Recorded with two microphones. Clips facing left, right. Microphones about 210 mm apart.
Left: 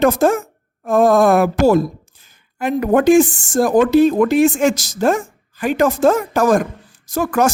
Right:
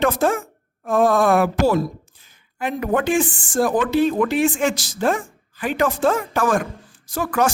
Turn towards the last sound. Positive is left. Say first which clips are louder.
# left 4 dB
turn(degrees=45)  # may be behind; listen again after turning